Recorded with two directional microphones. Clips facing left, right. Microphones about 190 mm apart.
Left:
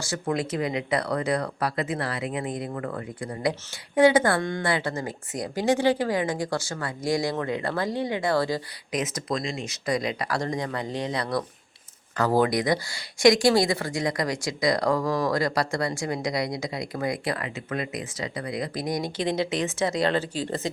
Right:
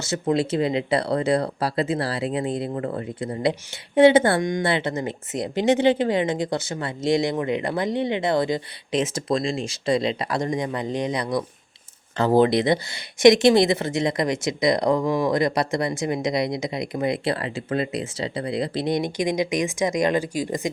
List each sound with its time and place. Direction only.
0.0 s speech: 25° right (ahead or behind)